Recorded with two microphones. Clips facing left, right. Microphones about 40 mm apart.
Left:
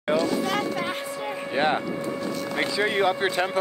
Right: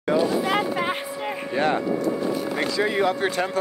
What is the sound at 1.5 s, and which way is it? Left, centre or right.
Cattle, left.